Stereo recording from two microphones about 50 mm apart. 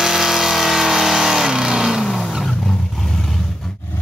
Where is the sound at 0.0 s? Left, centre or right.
Centre.